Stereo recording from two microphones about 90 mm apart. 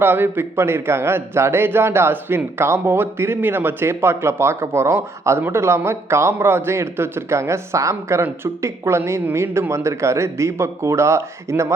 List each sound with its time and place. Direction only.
0.0 s a man's voice: 25° right (ahead or behind)